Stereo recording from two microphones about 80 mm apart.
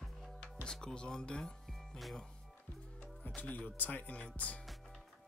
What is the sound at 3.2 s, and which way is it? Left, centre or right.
Speech, centre.